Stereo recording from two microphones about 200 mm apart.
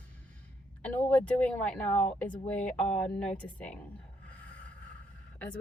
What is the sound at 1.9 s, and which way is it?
Speech, 35° left (ahead or behind).